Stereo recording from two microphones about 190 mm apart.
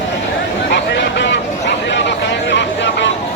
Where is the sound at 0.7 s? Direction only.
65° left (ahead or behind).